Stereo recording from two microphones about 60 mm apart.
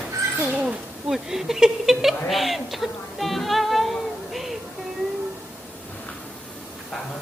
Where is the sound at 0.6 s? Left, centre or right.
Right.